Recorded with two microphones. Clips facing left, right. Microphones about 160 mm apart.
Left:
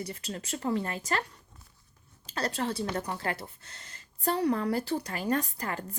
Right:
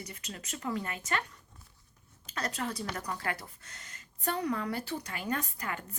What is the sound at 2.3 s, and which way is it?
Speech, 30° left (ahead or behind).